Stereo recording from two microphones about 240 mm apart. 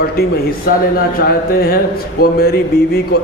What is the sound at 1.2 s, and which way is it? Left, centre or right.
A man's voice, left.